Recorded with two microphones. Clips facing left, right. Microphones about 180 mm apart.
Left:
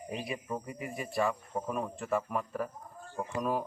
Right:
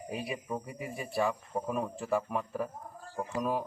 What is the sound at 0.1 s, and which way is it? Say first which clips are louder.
Speech: right 1 dB; 5° right (ahead or behind).